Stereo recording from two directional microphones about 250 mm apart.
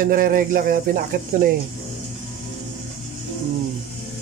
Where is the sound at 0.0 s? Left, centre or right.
Right.